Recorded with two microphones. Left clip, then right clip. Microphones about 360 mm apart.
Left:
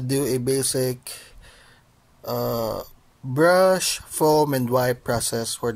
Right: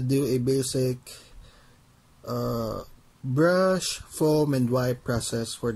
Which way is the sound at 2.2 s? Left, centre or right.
Centre.